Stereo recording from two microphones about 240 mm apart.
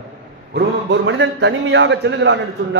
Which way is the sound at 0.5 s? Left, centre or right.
Right.